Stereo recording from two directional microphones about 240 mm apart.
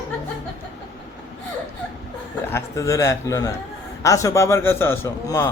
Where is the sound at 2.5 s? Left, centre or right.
Centre.